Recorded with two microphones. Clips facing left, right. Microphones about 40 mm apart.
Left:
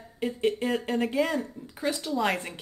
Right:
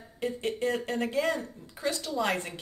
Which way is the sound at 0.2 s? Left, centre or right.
Centre.